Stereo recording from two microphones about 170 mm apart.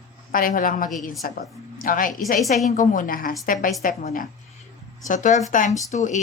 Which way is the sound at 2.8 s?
55° left (ahead or behind).